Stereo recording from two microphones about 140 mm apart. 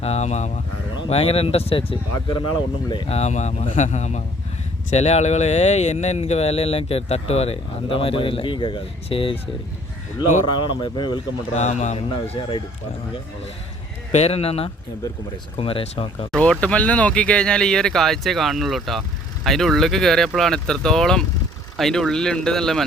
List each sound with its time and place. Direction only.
0.0 s speech: 50° left (ahead or behind)
0.9 s speech: 40° left (ahead or behind)
3.1 s speech: 50° left (ahead or behind)
10.7 s speech: 35° left (ahead or behind)
11.5 s speech: 55° left (ahead or behind); by 12.6 s 35° left (ahead or behind)
14.1 s speech: 50° left (ahead or behind)
16.3 s speech: 10° left (ahead or behind)